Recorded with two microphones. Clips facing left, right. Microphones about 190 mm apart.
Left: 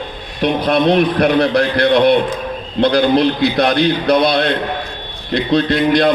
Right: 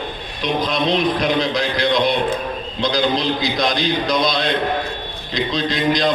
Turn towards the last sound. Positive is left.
turn(degrees=65)  # may be behind; listen again after turning